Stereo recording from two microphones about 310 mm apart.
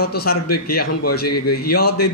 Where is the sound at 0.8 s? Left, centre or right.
Left.